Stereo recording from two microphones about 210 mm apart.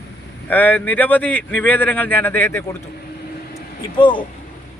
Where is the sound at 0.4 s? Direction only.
10° left (ahead or behind).